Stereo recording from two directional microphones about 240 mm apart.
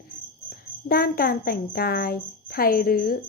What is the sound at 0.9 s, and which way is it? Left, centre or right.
A woman's voice, left.